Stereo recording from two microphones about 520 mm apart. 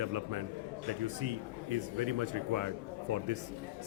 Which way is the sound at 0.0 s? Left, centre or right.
Right.